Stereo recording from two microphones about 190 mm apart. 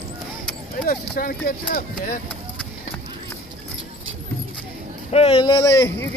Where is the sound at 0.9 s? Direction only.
50° left (ahead or behind).